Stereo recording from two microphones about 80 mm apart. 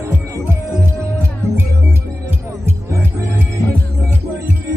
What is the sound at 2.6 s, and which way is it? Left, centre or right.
Music, right.